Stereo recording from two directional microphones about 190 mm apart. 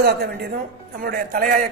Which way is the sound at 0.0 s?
55° right (ahead or behind).